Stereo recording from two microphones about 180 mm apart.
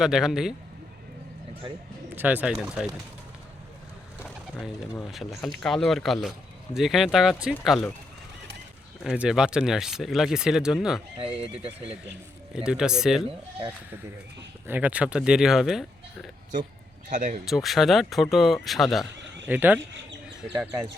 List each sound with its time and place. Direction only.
0.0 s speech: 5° right (ahead or behind)
2.1 s speech: 10° right (ahead or behind)
4.2 s speech: 5° left (ahead or behind)
9.1 s speech: 5° right (ahead or behind)
11.3 s speech: 30° right (ahead or behind)
12.5 s speech: 5° right (ahead or behind)
14.7 s speech: 10° right (ahead or behind)
17.1 s speech: 45° right (ahead or behind)
17.4 s speech: centre (ahead or behind)